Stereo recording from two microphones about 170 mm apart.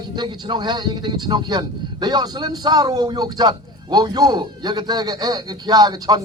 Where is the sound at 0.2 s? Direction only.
25° right (ahead or behind).